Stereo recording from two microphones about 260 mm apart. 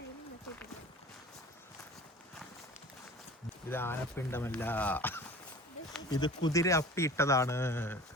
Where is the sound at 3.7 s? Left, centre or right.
Centre.